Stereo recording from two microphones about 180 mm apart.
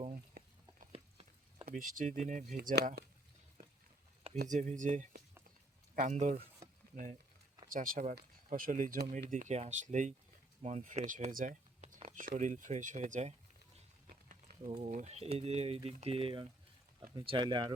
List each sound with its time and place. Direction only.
0.9 s a sound: 35° right (ahead or behind)
1.6 s speech: 50° right (ahead or behind)
2.6 s speech: 65° right (ahead or behind)
4.4 s speech: 45° right (ahead or behind); by 17.7 s 25° right (ahead or behind)